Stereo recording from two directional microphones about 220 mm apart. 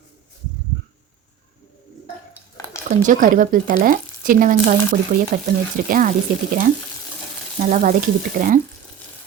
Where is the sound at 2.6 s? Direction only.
15° left (ahead or behind).